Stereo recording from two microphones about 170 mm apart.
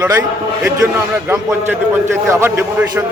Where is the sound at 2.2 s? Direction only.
10° right (ahead or behind).